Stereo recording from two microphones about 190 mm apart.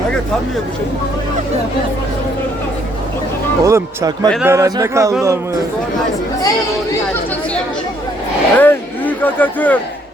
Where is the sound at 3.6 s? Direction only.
15° right (ahead or behind).